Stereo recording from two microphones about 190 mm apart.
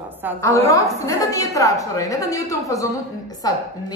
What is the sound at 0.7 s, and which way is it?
A woman's voice, 15° left (ahead or behind).